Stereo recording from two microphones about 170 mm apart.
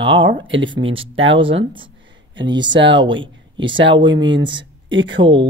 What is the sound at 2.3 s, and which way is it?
Speech, 25° right (ahead or behind).